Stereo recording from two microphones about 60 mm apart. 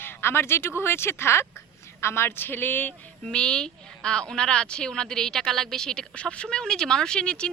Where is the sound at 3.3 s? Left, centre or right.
Centre.